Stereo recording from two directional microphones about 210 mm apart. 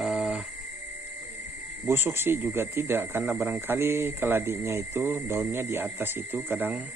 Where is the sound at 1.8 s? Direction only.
10° right (ahead or behind).